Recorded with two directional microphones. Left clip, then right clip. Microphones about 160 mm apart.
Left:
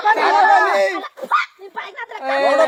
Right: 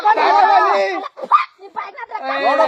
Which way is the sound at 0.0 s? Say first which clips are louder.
Right 1 dB; 15° left (ahead or behind).